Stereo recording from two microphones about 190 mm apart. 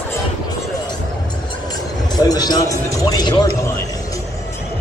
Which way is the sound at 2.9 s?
20° left (ahead or behind).